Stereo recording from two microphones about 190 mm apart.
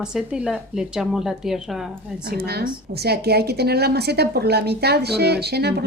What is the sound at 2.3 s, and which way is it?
A woman's voice, 55° right (ahead or behind).